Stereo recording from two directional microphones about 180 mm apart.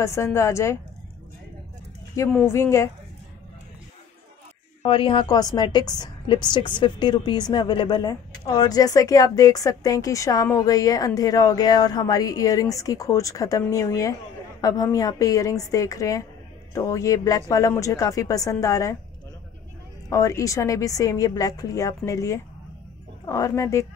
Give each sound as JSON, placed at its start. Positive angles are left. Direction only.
{"t": 0.0, "sound": "a woman's voice", "side_deg": 15}
{"t": 2.4, "sound": "a woman's voice", "side_deg": 15}
{"t": 4.8, "sound": "a woman's voice", "side_deg": 30}
{"t": 20.1, "sound": "a woman's voice", "side_deg": 20}